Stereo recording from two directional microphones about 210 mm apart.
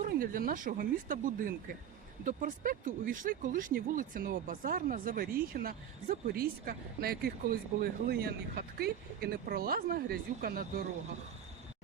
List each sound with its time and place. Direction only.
0.0 s speech: 45° right (ahead or behind)